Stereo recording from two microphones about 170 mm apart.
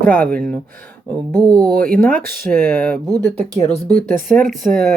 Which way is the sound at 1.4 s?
25° right (ahead or behind).